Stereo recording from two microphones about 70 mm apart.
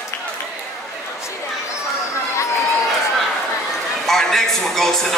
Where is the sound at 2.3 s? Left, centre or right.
Left.